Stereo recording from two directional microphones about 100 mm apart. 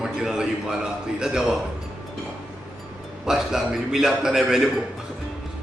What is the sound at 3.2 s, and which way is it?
A man's voice, 5° right (ahead or behind).